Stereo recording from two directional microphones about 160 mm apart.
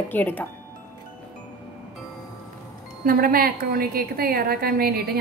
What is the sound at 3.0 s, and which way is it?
A woman's voice, 70° right (ahead or behind).